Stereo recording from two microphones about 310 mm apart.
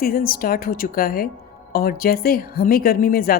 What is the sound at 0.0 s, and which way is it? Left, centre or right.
A woman's voice, left.